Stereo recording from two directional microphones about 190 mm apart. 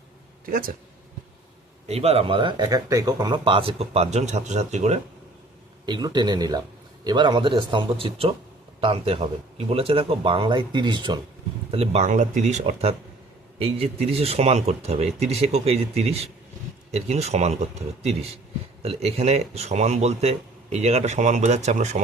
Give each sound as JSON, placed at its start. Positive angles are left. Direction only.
{"t": 0.4, "sound": "speech", "side_deg": -50}
{"t": 1.9, "sound": "speech", "side_deg": -30}
{"t": 5.8, "sound": "speech", "side_deg": -25}